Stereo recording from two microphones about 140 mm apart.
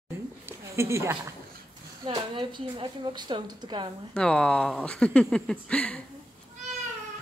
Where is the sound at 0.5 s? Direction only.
20° right (ahead or behind).